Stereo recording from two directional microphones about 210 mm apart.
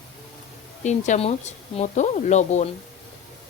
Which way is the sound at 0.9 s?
35° left (ahead or behind).